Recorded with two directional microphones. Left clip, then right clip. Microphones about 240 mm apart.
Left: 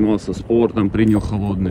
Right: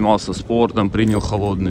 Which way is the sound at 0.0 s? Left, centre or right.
Centre.